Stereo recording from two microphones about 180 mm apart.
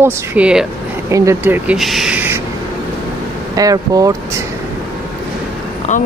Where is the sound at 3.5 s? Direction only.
20° right (ahead or behind).